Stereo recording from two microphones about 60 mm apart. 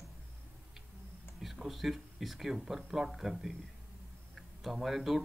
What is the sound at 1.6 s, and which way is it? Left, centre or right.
Speech, centre.